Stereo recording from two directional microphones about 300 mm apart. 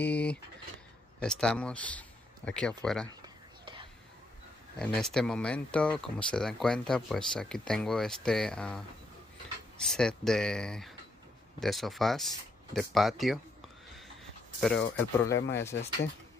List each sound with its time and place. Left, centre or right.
0.0 s speech: centre
4.7 s speech: centre
14.6 s speech: centre
15.3 s speech: left